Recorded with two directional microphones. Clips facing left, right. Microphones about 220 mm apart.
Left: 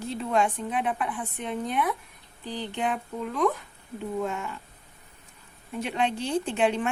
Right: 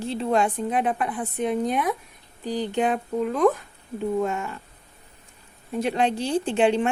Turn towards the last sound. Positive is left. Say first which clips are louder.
# right 5 dB
turn(degrees=-30)  # may be behind; listen again after turning